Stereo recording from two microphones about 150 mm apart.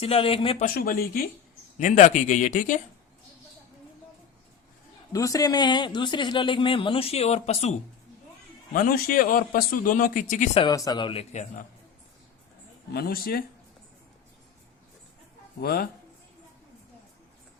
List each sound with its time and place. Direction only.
0.0 s speech: 40° left (ahead or behind)
0.6 s speech: 75° left (ahead or behind)
1.8 s speech: 50° left (ahead or behind)
5.1 s speech: 25° left (ahead or behind); by 7.8 s 45° left (ahead or behind)
8.7 s speech: 70° left (ahead or behind)
10.7 s speech: 25° left (ahead or behind); by 11.6 s 50° left (ahead or behind)
12.9 s speech: 90° left
15.6 s speech: 90° left